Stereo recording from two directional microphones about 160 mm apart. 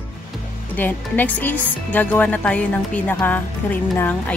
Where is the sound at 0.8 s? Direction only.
10° left (ahead or behind).